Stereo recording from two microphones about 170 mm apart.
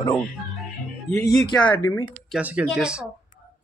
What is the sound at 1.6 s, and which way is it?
Speech, 15° left (ahead or behind).